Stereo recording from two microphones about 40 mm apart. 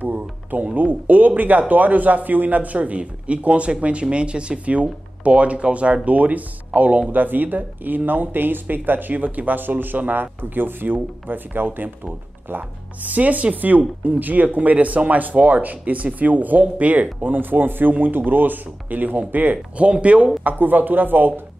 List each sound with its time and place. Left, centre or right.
0.0 s a sound: right
0.7 s speech: right
7.2 s speech: right
19.8 s speech: right
20.4 s speech: right